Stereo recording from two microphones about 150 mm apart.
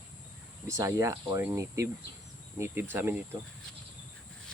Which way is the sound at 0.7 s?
20° right (ahead or behind).